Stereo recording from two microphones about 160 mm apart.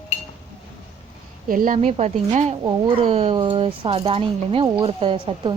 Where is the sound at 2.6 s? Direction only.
30° right (ahead or behind).